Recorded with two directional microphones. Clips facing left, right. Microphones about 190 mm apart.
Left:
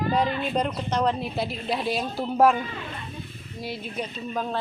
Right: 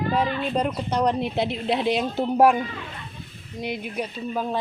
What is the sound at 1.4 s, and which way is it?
A woman's voice, 20° right (ahead or behind).